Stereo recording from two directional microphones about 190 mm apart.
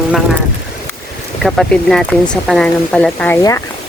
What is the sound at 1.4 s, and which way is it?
Speech, centre (ahead or behind).